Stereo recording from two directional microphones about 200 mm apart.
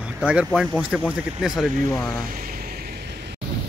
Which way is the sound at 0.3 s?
5° right (ahead or behind).